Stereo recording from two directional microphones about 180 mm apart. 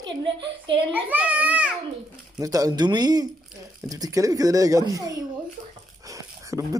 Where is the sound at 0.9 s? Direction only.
10° right (ahead or behind).